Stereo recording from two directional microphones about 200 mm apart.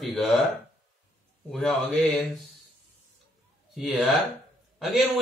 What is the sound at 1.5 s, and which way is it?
Speech, 5° left (ahead or behind).